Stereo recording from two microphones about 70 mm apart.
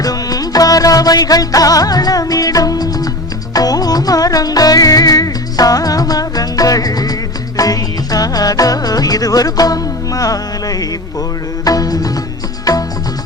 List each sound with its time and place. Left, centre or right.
0.0 s music: left